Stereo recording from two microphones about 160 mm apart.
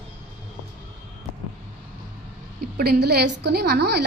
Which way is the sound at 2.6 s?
75° right (ahead or behind).